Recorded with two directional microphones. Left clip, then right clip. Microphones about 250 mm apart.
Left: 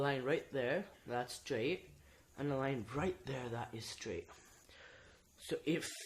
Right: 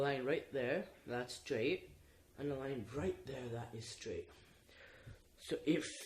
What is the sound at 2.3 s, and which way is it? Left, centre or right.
Speech, left.